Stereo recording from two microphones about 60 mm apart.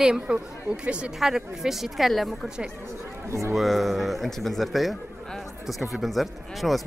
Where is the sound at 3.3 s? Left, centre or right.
Right.